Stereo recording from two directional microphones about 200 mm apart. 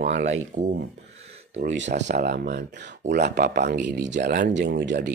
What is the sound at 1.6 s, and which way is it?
Speech, 60° right (ahead or behind).